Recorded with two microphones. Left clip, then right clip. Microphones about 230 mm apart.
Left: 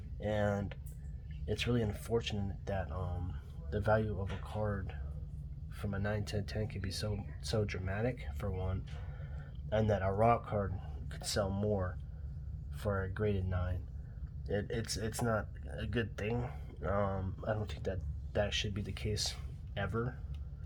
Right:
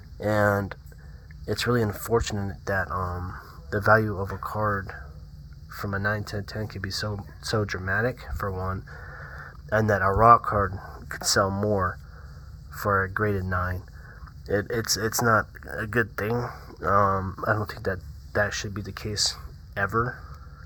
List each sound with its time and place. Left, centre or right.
0.3 s speech: right